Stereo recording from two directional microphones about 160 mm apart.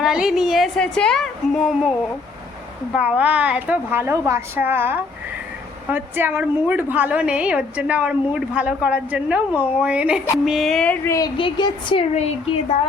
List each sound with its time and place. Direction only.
0.0 s a woman's voice: 5° right (ahead or behind)
2.9 s a woman's voice: 5° right (ahead or behind)
11.1 s a woman's voice: 30° left (ahead or behind)